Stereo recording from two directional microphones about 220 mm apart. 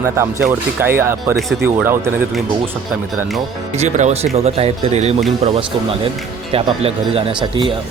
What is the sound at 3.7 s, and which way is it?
Speech, 30° right (ahead or behind).